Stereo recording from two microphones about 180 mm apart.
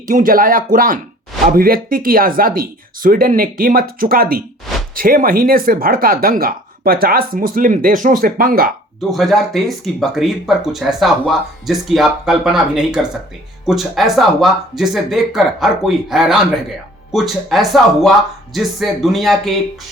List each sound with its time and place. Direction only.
0.1 s speech: 50° right (ahead or behind)
9.0 s speech: centre (ahead or behind)